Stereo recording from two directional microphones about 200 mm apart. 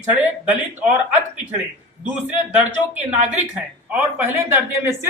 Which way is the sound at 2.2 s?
5° right (ahead or behind).